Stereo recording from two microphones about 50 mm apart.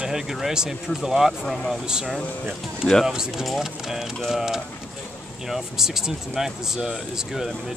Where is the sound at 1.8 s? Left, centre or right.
Centre.